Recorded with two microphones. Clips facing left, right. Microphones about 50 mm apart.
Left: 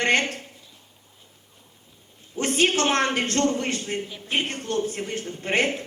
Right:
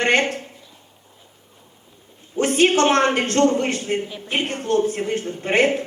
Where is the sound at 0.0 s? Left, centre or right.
Right.